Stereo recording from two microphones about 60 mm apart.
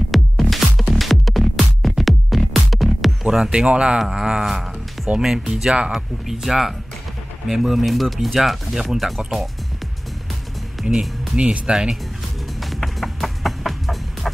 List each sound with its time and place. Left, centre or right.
0.1 s music: centre
3.5 s speech: centre
10.8 s music: centre
11.3 s speech: centre
12.6 s music: centre